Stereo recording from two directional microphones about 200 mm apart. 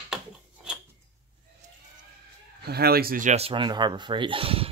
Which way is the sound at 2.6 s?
50° right (ahead or behind).